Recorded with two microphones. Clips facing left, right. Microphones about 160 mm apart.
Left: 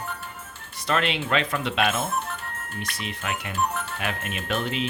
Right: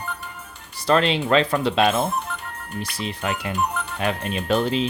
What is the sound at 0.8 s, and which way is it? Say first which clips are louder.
Speech: right 6 dB; 35° right (ahead or behind).